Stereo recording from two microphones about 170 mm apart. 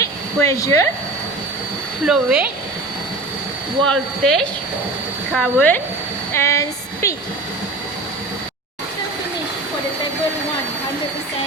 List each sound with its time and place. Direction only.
0.0 s a sound: 20° left (ahead or behind)
2.0 s speech: 5° right (ahead or behind)
3.8 s a woman's voice: centre (ahead or behind)